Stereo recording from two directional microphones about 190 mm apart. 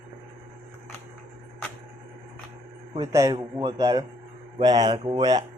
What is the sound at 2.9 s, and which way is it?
A woman's voice, 15° right (ahead or behind).